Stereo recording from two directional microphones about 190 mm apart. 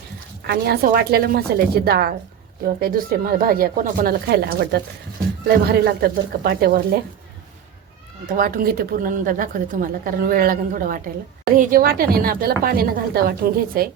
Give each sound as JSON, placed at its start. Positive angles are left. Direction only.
{"t": 0.4, "sound": "a woman's voice", "side_deg": -55}
{"t": 8.4, "sound": "a woman's voice", "side_deg": -50}